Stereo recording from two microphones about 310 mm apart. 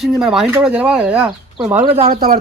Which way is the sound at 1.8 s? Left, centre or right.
Centre.